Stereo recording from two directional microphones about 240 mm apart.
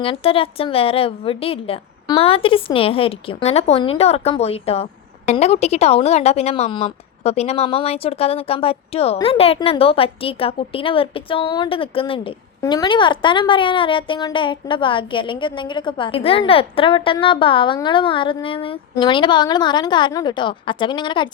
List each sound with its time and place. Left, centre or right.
0.0 s a woman's voice: left